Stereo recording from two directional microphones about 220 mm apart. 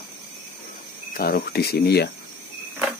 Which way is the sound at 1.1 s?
45° left (ahead or behind).